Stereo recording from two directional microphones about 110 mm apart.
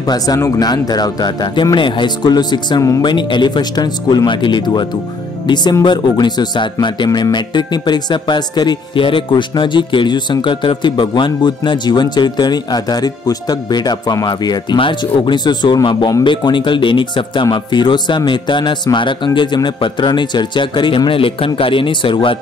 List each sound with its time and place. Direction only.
0.0 s speech: 35° left (ahead or behind); by 22.4 s 50° left (ahead or behind)